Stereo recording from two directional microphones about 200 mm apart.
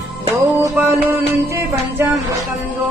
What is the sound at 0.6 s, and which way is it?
Music, 10° right (ahead or behind).